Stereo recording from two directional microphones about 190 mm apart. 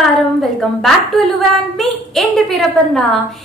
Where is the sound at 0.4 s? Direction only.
Centre (ahead or behind).